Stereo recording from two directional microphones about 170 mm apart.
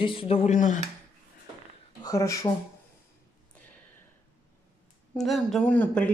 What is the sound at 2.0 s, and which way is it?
Speech, 20° left (ahead or behind).